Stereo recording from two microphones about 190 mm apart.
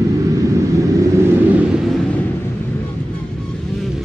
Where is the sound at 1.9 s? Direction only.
10° left (ahead or behind).